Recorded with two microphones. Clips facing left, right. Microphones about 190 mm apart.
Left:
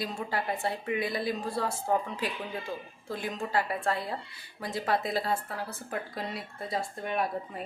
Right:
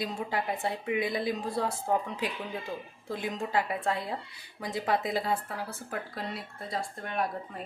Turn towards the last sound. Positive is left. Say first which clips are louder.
# left 1 dB
turn(degrees=5)  # may be behind; listen again after turning